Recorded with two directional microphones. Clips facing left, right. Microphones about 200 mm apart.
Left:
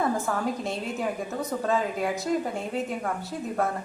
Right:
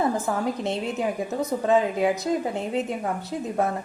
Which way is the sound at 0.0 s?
20° right (ahead or behind).